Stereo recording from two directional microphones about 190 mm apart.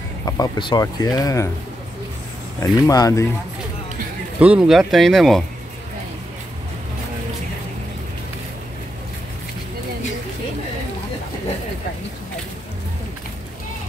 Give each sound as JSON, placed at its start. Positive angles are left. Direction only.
{"t": 0.2, "sound": "speech", "side_deg": 20}
{"t": 2.6, "sound": "speech", "side_deg": 20}
{"t": 4.4, "sound": "speech", "side_deg": -5}